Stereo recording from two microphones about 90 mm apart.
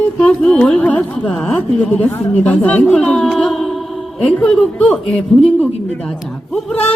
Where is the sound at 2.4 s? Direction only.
15° left (ahead or behind).